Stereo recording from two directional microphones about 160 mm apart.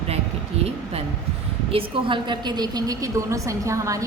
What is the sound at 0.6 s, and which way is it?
A woman's voice, 40° right (ahead or behind).